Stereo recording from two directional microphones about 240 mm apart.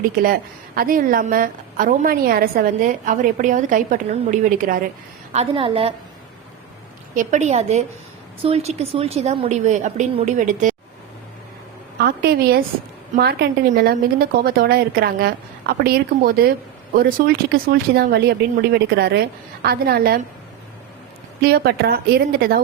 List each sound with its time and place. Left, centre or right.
0.8 s a woman's voice: right
5.3 s a woman's voice: right
7.1 s a woman's voice: right
12.0 s a woman's voice: right
21.4 s a woman's voice: right